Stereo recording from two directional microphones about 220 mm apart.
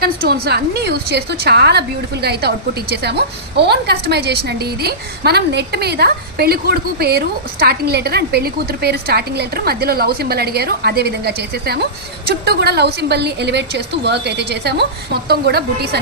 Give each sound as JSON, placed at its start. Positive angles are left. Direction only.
{"t": 0.0, "sound": "a woman's voice", "side_deg": -45}